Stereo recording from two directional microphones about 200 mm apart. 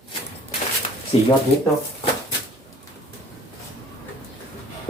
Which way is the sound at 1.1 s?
30° left (ahead or behind).